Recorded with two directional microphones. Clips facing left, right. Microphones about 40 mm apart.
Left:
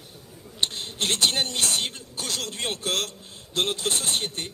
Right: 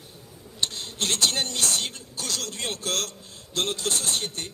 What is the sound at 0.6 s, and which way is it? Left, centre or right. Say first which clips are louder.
A man's voice: left 2 dB; left.